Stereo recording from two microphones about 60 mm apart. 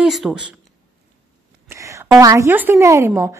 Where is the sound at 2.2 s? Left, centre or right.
Right.